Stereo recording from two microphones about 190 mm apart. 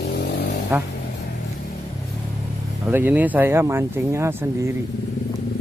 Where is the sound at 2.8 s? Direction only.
10° right (ahead or behind).